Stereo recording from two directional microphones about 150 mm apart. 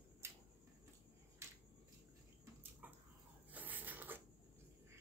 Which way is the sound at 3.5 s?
10° right (ahead or behind).